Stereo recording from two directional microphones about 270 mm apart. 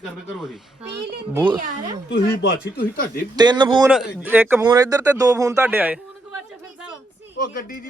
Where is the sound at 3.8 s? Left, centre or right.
Centre.